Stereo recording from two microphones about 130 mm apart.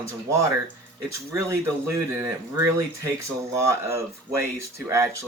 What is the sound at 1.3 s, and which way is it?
Speech, 20° right (ahead or behind).